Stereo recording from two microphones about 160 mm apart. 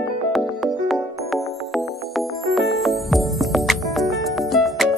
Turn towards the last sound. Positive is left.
turn(degrees=0)  # may be behind; listen again after turning